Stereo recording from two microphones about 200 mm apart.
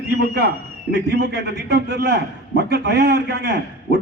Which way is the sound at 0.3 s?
55° right (ahead or behind).